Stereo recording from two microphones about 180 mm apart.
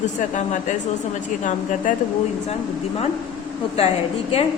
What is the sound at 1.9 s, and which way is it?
Speech, 45° left (ahead or behind).